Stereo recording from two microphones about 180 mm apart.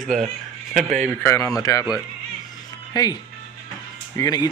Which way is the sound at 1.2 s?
15° left (ahead or behind).